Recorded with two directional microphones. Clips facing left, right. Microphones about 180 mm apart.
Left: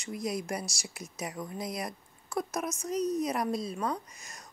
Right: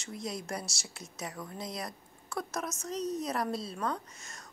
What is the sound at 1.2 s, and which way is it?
Speech, 20° left (ahead or behind).